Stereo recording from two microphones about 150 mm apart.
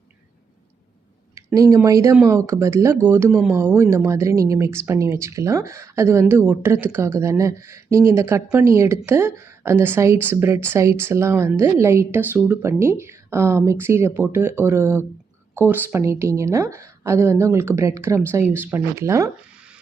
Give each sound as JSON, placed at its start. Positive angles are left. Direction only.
{"t": 1.4, "sound": "speech", "side_deg": -20}